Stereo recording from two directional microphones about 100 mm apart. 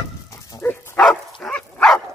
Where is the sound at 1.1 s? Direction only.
5° left (ahead or behind).